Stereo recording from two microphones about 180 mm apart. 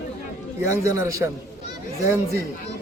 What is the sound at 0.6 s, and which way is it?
Speech, 15° right (ahead or behind).